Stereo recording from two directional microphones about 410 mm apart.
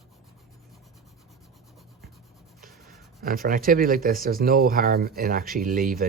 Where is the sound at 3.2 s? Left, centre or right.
Right.